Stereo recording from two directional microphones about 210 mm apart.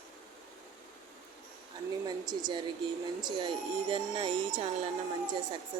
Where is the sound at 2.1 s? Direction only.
20° right (ahead or behind).